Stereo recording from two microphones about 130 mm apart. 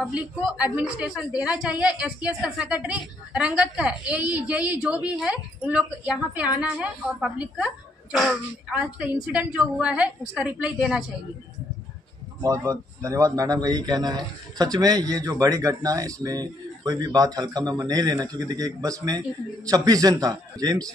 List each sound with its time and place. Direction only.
0.1 s a woman's voice: 10° right (ahead or behind)
12.4 s speech: 25° right (ahead or behind)